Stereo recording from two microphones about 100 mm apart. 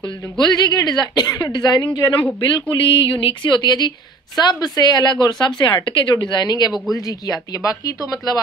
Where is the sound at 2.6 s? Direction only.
60° left (ahead or behind).